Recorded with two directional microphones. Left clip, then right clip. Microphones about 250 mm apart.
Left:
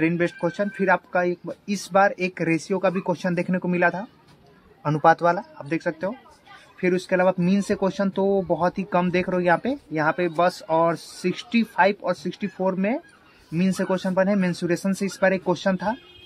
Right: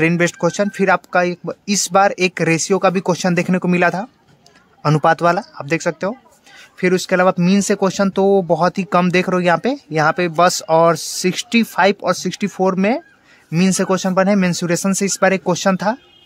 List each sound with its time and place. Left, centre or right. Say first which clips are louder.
0.0 s speech: right 7 dB; right